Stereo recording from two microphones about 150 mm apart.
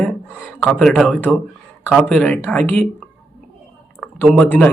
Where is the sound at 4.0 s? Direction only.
5° left (ahead or behind).